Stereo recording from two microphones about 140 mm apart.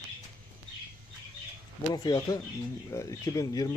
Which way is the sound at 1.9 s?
25° left (ahead or behind).